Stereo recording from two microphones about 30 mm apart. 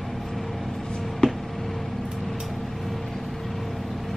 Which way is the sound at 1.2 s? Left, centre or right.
Left.